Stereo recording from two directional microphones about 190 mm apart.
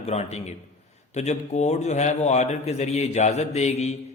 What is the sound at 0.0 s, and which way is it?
A man's voice, 35° left (ahead or behind).